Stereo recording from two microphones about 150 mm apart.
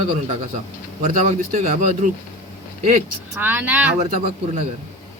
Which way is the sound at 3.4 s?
10° right (ahead or behind).